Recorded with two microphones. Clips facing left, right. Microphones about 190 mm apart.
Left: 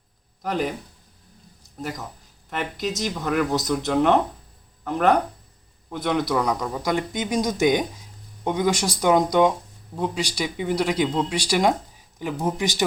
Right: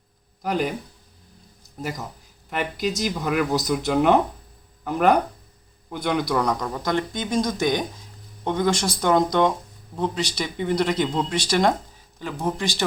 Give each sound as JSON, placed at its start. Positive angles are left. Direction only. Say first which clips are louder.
{"t": 0.4, "sound": "speech", "louder": "right 1 dB", "side_deg": 0}
{"t": 1.8, "sound": "speech", "louder": "right 1 dB", "side_deg": -5}